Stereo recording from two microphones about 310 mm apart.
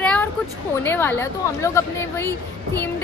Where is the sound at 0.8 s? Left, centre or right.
Centre.